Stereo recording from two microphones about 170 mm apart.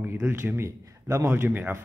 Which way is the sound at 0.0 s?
15° right (ahead or behind).